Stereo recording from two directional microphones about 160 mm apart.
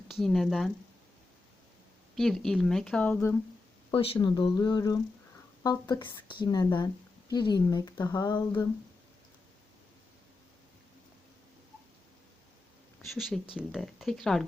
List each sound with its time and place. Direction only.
0.1 s speech: centre (ahead or behind)
2.1 s speech: centre (ahead or behind)
3.9 s speech: 35° left (ahead or behind)
13.1 s speech: centre (ahead or behind)